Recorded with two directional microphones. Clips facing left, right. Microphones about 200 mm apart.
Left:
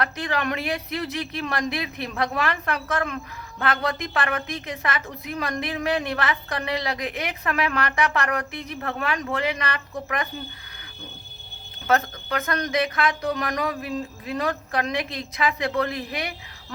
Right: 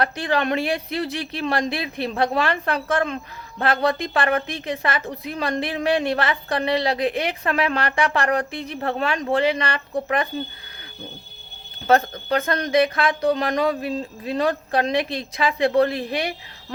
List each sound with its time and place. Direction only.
0.0 s a woman's voice: 30° right (ahead or behind)
11.9 s a woman's voice: 30° right (ahead or behind)